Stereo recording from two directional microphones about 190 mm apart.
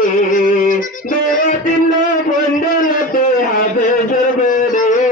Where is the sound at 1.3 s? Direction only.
40° left (ahead or behind).